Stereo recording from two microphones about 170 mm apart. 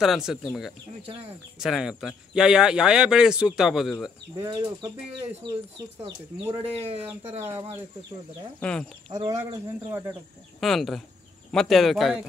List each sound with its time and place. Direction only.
0.0 s speech: centre (ahead or behind)
4.5 s speech: 25° right (ahead or behind)
6.5 s speech: 35° right (ahead or behind)
8.5 s speech: 5° left (ahead or behind)
9.1 s speech: 20° right (ahead or behind)
10.6 s speech: centre (ahead or behind)